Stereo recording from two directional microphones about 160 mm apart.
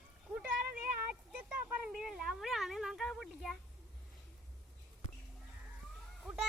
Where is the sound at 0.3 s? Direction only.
10° right (ahead or behind).